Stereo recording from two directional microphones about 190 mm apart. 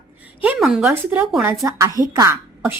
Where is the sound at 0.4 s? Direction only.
5° right (ahead or behind).